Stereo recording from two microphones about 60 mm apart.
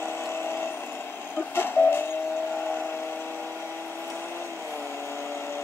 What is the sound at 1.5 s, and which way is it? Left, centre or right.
Train, left.